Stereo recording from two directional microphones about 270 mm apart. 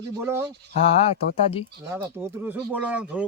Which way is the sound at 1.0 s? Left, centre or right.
Left.